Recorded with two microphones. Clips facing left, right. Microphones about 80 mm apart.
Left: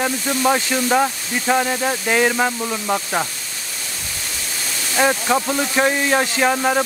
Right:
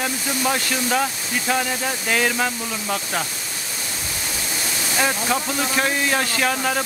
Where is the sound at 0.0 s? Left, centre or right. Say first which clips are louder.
Left 4 dB; centre.